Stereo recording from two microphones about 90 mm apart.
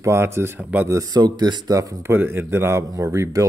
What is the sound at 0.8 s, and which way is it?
Speech, 40° right (ahead or behind).